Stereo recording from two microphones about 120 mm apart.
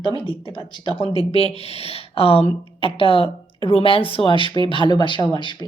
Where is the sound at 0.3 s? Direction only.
45° left (ahead or behind).